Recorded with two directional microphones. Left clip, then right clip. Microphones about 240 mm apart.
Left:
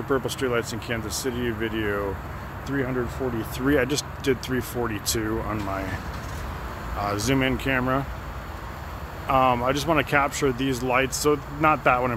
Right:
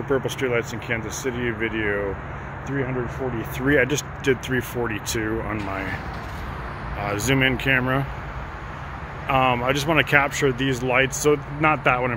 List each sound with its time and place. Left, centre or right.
0.1 s speech: centre
3.5 s speech: centre
7.2 s speech: centre
9.3 s speech: centre